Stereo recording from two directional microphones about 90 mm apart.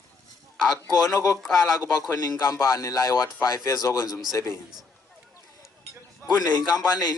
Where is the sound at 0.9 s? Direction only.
45° left (ahead or behind).